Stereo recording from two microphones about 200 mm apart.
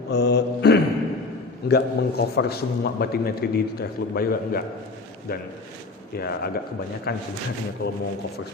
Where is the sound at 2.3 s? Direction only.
50° left (ahead or behind).